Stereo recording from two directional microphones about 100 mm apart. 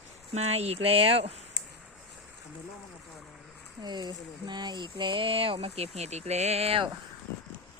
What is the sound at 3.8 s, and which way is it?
Speech, 45° right (ahead or behind).